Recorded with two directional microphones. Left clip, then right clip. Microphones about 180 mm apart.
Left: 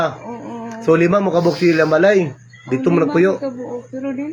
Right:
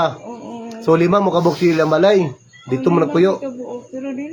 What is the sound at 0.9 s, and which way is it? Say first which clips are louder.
Speech: even; 15° right (ahead or behind).